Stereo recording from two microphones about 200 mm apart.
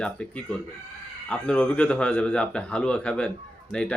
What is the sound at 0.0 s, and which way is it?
Speech, 5° left (ahead or behind).